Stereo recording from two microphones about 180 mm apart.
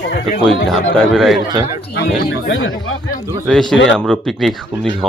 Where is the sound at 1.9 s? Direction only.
65° left (ahead or behind); by 2.7 s 90° left.